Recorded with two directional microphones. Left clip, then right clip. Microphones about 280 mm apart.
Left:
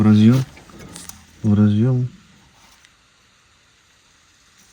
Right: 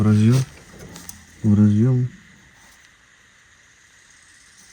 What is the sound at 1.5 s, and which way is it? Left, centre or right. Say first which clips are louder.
Speech: even; centre.